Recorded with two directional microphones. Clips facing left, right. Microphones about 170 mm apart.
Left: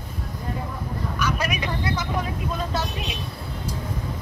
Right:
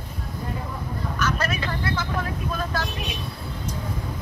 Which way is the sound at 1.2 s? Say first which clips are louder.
Even; 10° left (ahead or behind).